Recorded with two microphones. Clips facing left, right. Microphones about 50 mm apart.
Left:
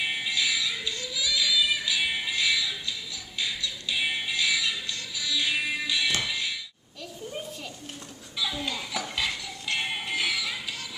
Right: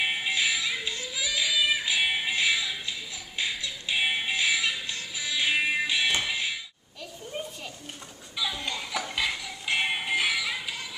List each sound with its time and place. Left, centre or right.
0.0 s music: right
6.2 s a sound: right
8.4 s music: centre